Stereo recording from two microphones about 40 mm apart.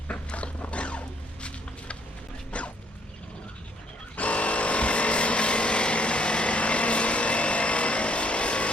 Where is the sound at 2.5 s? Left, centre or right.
Left.